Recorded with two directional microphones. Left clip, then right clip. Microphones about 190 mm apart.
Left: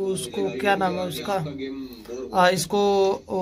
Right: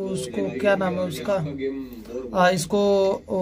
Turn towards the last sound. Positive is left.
turn(degrees=0)  # may be behind; listen again after turning